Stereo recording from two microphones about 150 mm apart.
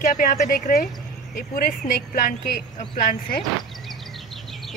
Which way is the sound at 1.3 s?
75° left (ahead or behind).